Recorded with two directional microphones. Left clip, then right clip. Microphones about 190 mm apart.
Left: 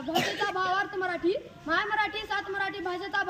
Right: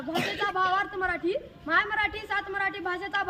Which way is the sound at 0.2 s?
25° right (ahead or behind).